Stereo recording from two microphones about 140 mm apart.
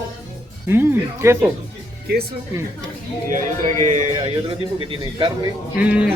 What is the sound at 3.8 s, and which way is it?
Speech, 60° right (ahead or behind).